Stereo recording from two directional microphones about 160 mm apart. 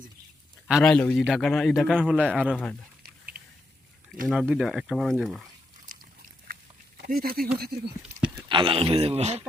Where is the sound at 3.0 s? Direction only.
70° right (ahead or behind).